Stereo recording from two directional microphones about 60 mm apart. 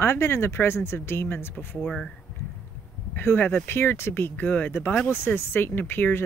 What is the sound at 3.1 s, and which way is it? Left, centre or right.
Speech, left.